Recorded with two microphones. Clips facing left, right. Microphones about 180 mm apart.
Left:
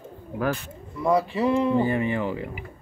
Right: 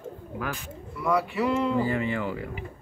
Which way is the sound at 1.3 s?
30° left (ahead or behind).